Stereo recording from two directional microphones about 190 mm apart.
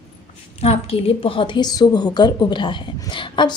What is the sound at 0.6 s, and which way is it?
A woman's voice, 30° left (ahead or behind).